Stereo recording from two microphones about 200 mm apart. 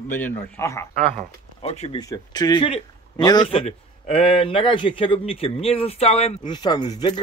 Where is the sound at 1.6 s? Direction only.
30° left (ahead or behind).